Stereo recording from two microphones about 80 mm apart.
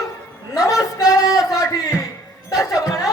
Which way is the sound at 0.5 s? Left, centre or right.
Left.